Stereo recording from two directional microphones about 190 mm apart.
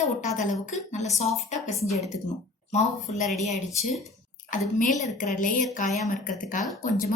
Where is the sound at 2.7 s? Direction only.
35° left (ahead or behind).